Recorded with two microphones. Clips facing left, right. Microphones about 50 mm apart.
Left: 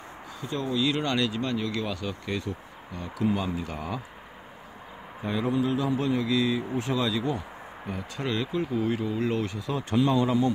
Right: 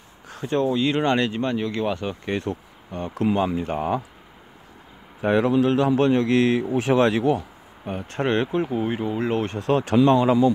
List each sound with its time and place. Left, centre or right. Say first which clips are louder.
0.3 s speech: right 9 dB; right
0.7 s speech: right 3 dB; right
5.2 s a man's voice: right 8 dB; right
7.8 s speech: right 7 dB; right
9.6 s speech: right 11 dB; right